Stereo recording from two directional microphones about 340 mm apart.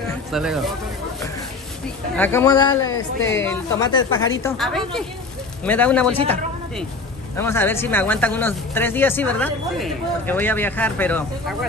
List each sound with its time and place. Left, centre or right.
0.3 s speech: centre
2.1 s speech: centre
2.9 s a woman's voice: left
3.4 s speech: centre
7.3 s speech: centre